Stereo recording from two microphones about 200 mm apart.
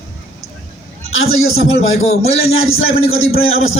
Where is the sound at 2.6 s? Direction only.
90° left.